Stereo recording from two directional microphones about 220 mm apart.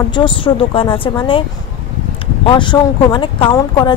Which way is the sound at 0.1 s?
20° left (ahead or behind).